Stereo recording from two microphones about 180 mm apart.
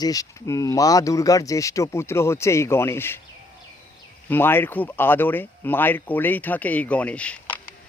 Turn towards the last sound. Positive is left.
turn(degrees=10)  # may be behind; listen again after turning